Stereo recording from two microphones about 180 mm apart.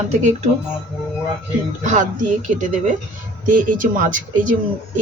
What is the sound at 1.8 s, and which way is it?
Speech, 45° right (ahead or behind).